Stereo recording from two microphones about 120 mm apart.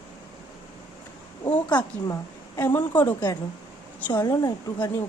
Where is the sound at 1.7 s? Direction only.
35° left (ahead or behind).